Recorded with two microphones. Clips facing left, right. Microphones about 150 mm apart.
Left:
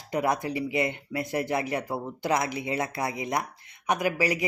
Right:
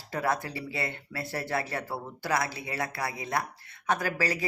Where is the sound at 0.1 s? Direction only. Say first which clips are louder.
Left 3 dB; 20° left (ahead or behind).